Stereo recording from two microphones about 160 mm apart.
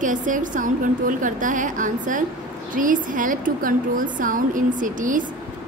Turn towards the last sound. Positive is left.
turn(degrees=-55)  # may be behind; listen again after turning